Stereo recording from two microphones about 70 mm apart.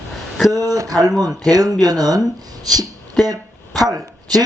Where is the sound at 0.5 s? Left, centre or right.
Right.